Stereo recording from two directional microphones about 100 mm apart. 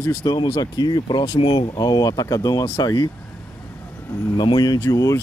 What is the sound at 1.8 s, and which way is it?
Speech, 40° left (ahead or behind).